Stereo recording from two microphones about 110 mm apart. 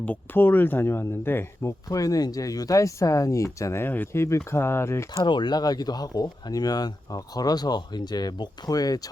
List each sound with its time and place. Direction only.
0.0 s speech: 15° left (ahead or behind)
5.1 s speech: 45° left (ahead or behind)